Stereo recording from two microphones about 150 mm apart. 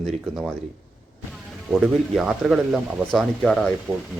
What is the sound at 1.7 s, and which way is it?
Speech, 5° right (ahead or behind).